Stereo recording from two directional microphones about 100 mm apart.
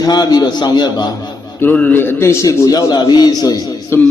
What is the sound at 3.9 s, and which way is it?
Speech, 25° left (ahead or behind).